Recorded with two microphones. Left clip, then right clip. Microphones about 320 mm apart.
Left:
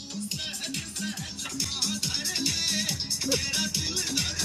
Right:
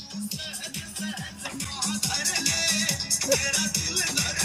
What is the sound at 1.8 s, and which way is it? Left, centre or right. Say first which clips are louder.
Music: right 4 dB; centre.